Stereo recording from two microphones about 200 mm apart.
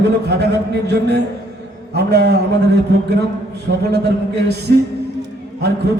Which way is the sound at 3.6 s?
55° right (ahead or behind).